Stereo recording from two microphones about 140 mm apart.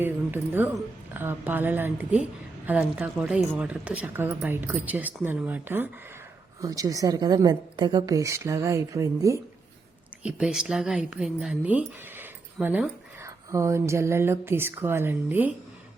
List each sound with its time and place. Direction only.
0.0 s speech: 15° right (ahead or behind)
6.6 s a woman's voice: 25° right (ahead or behind)
10.2 s a woman's voice: 5° right (ahead or behind)